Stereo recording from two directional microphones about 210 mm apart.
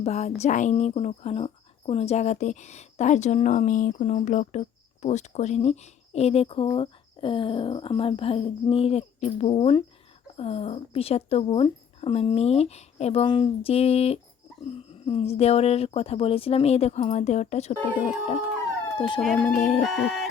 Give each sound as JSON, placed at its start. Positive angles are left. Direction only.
{"t": 0.0, "sound": "speech", "side_deg": 30}
{"t": 17.9, "sound": "speech", "side_deg": -5}
{"t": 18.9, "sound": "speech", "side_deg": 20}
{"t": 19.2, "sound": "speech", "side_deg": 0}